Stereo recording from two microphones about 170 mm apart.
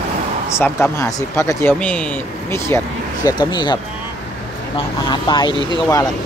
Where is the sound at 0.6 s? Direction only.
15° left (ahead or behind).